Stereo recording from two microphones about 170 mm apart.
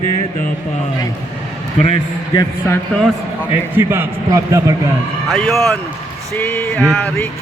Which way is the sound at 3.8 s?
15° right (ahead or behind).